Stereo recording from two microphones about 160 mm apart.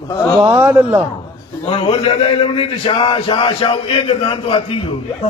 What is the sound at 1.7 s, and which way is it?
A man's voice, 35° left (ahead or behind).